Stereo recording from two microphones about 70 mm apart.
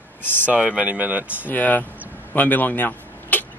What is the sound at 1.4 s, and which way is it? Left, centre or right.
Speech, left.